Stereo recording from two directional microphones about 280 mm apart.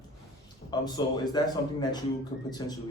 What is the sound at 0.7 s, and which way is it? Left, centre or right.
Speech, centre.